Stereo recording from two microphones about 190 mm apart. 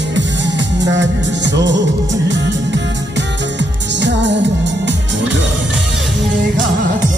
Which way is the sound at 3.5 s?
70° right (ahead or behind).